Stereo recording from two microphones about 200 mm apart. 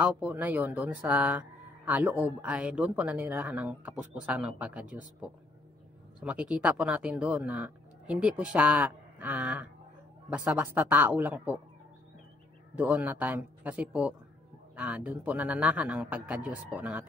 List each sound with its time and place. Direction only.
0.0 s speech: 10° right (ahead or behind)
12.7 s speech: 5° right (ahead or behind)